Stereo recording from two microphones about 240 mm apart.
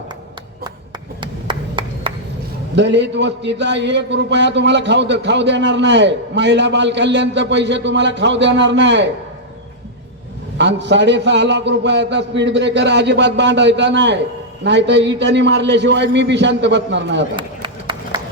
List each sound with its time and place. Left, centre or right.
1.2 s clapping: centre
2.7 s a man's voice: right
10.6 s a man's voice: right
17.3 s run: centre